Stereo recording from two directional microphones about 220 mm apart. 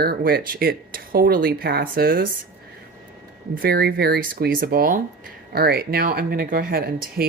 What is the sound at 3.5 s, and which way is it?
Speech, 45° right (ahead or behind).